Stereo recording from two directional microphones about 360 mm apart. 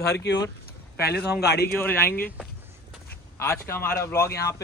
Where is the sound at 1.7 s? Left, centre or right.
Centre.